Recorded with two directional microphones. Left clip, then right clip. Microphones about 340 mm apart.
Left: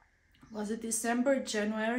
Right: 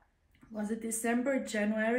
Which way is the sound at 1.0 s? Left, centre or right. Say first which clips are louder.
Left 2 dB; centre.